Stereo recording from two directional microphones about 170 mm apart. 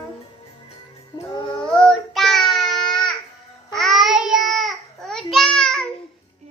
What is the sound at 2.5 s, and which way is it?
Baby cry, centre (ahead or behind).